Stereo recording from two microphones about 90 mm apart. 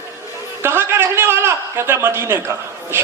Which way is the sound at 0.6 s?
25° right (ahead or behind).